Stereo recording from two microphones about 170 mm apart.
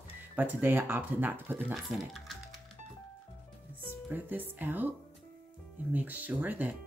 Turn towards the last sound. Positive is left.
turn(degrees=-10)  # may be behind; listen again after turning